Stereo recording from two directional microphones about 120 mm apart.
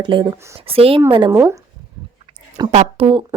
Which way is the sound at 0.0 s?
40° right (ahead or behind).